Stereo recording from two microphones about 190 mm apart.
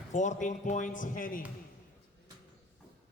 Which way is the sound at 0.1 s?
40° left (ahead or behind).